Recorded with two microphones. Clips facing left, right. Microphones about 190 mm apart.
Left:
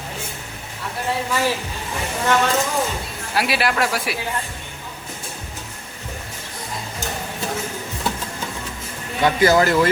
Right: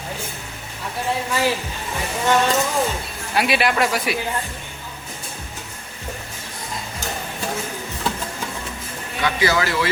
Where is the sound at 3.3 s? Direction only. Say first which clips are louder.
Right 1 dB; centre (ahead or behind).